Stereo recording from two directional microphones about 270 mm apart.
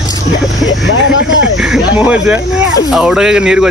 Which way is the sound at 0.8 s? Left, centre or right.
Left.